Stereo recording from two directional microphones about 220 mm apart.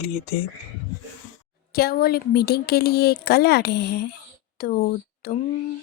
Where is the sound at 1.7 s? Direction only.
45° left (ahead or behind).